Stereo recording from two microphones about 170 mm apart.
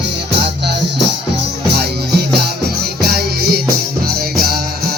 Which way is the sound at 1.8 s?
70° right (ahead or behind).